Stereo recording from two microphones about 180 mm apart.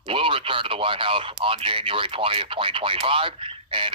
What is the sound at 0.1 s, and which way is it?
Speech, 30° right (ahead or behind).